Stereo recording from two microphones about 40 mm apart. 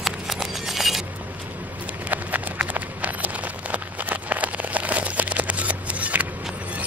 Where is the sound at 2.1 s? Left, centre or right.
Right.